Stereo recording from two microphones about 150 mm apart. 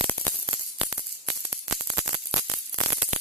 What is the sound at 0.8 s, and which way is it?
Music, 15° right (ahead or behind).